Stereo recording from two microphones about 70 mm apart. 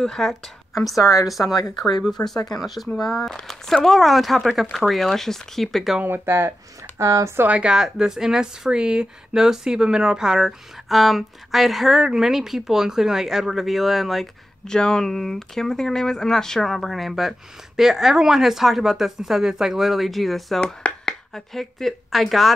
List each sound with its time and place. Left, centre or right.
0.0 s a woman's voice: centre
0.9 s a woman's voice: left
2.0 s speech: centre
2.3 s speech: left
2.6 s speech: centre
6.0 s speech: right
7.0 s speech: right
7.4 s a woman's voice: right
7.7 s speech: centre
20.6 s speech: centre